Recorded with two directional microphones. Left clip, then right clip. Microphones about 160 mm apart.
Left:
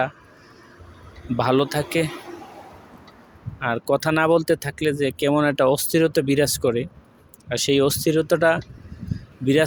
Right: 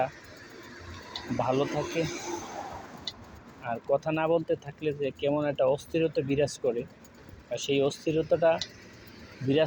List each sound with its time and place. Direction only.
1.4 s speech: 90° left
2.1 s a sound: 15° right (ahead or behind)
3.6 s speech: 90° left